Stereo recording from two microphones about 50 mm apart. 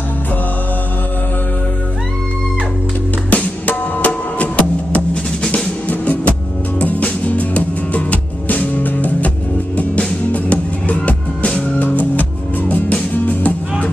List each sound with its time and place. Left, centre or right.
3.3 s music: left
5.9 s music: left